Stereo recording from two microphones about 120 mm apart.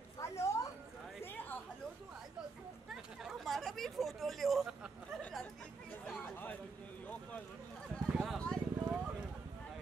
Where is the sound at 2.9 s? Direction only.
5° right (ahead or behind).